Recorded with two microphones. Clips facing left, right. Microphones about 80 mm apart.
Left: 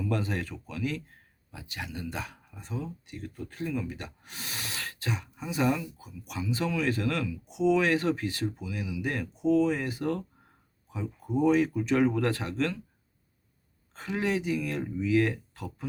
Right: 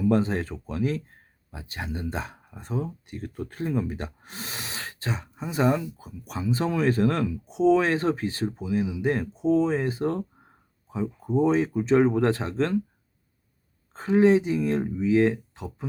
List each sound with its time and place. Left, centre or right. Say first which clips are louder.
0.0 s speech: right 8 dB; right
2.6 s speech: right 6 dB; right
13.9 s speech: right 11 dB; right